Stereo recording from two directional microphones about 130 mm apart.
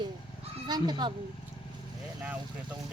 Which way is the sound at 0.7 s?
35° right (ahead or behind).